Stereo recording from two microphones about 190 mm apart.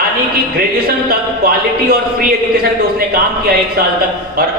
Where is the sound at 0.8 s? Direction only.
50° right (ahead or behind).